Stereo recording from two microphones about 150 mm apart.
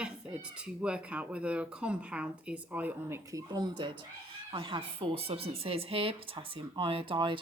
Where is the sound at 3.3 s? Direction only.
25° right (ahead or behind).